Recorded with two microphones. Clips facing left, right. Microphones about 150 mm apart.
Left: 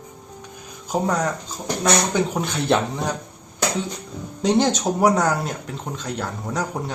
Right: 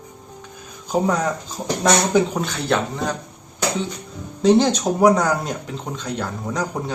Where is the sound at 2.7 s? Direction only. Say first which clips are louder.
Left 1 dB; 20° left (ahead or behind).